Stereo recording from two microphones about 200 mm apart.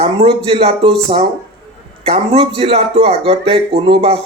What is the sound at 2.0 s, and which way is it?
Speech, 30° right (ahead or behind).